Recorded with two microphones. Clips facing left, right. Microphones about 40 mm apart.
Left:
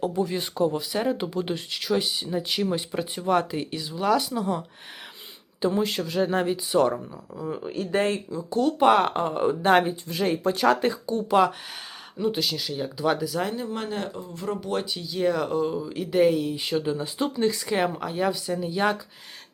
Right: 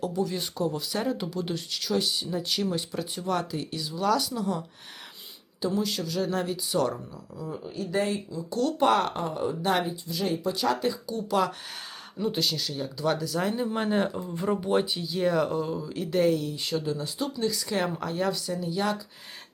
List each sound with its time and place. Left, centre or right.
0.0 s speech: left
5.6 s speech: left
7.5 s speech: left
8.4 s speech: left
9.2 s speech: left
11.0 s speech: left
12.2 s speech: centre
13.7 s speech: centre; by 17.7 s left
17.7 s speech: centre
18.5 s speech: left